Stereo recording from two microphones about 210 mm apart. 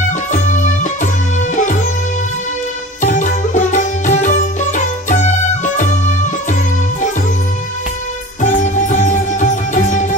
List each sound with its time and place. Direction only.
0.3 s music: 35° left (ahead or behind)
3.0 s music: 35° left (ahead or behind)
8.4 s music: 35° left (ahead or behind)